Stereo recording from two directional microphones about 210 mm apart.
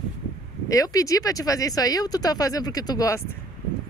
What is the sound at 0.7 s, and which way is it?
Speech, 15° left (ahead or behind).